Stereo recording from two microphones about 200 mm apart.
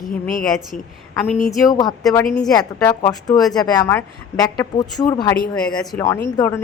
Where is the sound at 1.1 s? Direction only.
10° left (ahead or behind).